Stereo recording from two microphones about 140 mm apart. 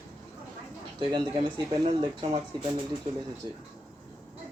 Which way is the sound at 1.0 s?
40° right (ahead or behind).